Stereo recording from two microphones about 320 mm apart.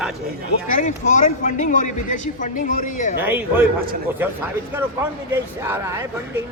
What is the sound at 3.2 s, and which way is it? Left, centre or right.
Speech, centre.